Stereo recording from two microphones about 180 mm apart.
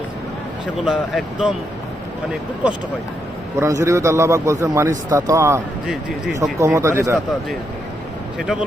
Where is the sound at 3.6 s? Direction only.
15° right (ahead or behind).